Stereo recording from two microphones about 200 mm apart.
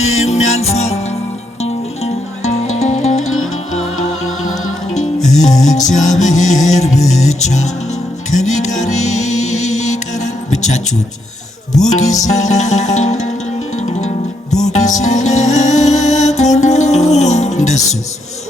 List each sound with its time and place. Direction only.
0.0 s music: 35° left (ahead or behind)
2.4 s music: 35° left (ahead or behind)
3.2 s music: 90° left
5.4 s music: 35° left (ahead or behind)
11.9 s music: 35° left (ahead or behind)